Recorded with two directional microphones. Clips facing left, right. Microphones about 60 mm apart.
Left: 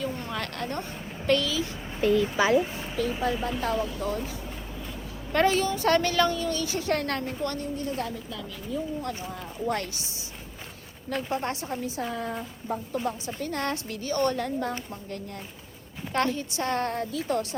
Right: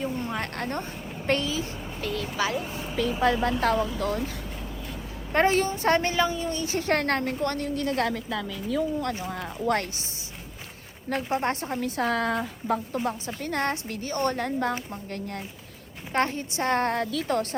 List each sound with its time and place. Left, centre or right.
0.0 s speech: right
2.1 s speech: centre
2.9 s a woman's voice: right
5.3 s a woman's voice: right
6.1 s speech: centre
6.4 s a woman's voice: right
6.7 s speech: right
7.6 s a woman's voice: right
9.3 s a woman's voice: right
11.1 s speech: right
11.8 s a woman's voice: right
16.1 s speech: right
16.9 s speech: right